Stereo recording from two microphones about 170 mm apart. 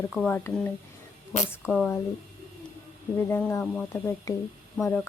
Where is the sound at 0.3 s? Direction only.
10° left (ahead or behind).